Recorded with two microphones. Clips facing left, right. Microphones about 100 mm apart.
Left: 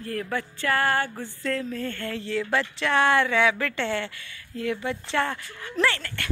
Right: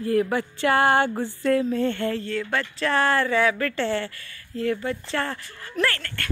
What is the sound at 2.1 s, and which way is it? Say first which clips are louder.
Speech: even; 10° left (ahead or behind).